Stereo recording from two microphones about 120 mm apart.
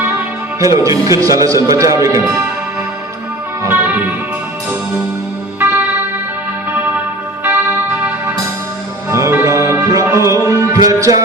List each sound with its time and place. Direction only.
0.6 s speech: 25° right (ahead or behind)
3.6 s music: 20° right (ahead or behind)
5.5 s music: 15° right (ahead or behind)
9.0 s music: 25° right (ahead or behind)